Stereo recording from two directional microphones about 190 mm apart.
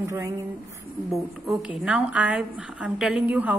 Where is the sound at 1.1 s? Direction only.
Centre (ahead or behind).